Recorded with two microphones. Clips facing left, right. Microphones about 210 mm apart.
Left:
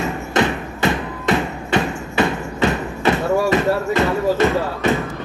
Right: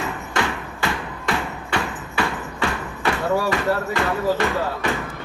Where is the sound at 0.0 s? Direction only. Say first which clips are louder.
Left 6 dB; 20° left (ahead or behind).